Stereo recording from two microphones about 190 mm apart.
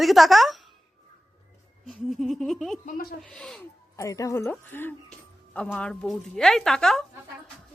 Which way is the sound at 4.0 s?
15° left (ahead or behind).